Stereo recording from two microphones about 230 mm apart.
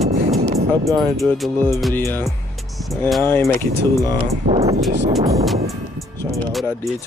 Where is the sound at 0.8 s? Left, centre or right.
Centre.